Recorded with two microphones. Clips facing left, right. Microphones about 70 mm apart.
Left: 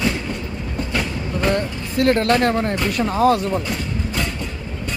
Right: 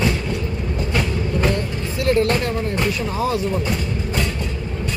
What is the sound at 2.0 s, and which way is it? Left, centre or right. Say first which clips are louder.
Speech: left 2 dB; left.